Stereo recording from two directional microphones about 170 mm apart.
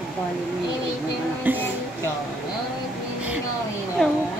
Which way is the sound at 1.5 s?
10° right (ahead or behind).